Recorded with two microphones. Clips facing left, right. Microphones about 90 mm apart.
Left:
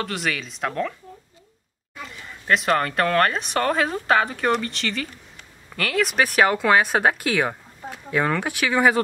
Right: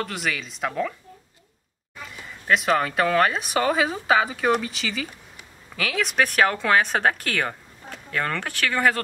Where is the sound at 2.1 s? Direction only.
Centre (ahead or behind).